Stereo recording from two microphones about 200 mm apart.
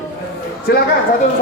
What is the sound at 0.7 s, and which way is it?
Speech, 55° left (ahead or behind).